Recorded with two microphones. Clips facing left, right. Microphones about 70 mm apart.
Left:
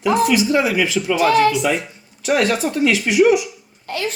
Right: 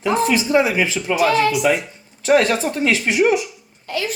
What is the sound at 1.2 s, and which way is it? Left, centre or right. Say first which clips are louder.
Speech: left 2 dB; left.